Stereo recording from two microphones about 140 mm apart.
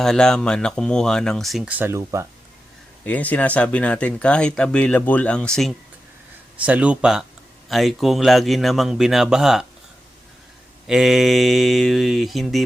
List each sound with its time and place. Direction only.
0.0 s speech: 5° left (ahead or behind)
1.8 s speech: 20° right (ahead or behind)
3.0 s speech: 10° left (ahead or behind)
6.7 s speech: 10° right (ahead or behind)
10.8 s speech: centre (ahead or behind)